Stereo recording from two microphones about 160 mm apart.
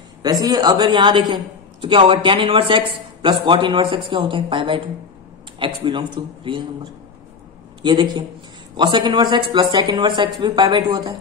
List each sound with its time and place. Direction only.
0.2 s a man's voice: 25° right (ahead or behind)